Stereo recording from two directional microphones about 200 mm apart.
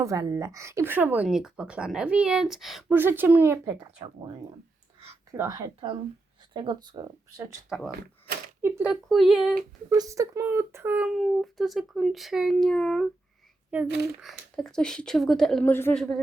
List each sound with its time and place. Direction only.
0.0 s speech: 15° right (ahead or behind)
3.8 s speech: 25° right (ahead or behind)
8.6 s a woman's voice: 10° right (ahead or behind)
9.9 s speech: 15° right (ahead or behind)
11.2 s a woman's voice: centre (ahead or behind)
13.8 s speech: 55° right (ahead or behind)
14.2 s a woman's voice: centre (ahead or behind)